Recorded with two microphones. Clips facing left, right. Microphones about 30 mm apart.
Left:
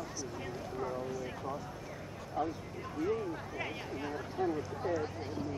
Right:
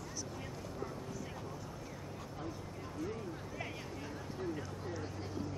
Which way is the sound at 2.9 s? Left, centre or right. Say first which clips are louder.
Left 8 dB; left.